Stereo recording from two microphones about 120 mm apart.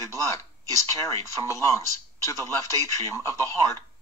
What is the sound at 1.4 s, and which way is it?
A man's voice, 25° left (ahead or behind).